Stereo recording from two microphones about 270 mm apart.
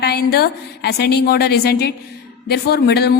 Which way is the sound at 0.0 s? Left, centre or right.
Left.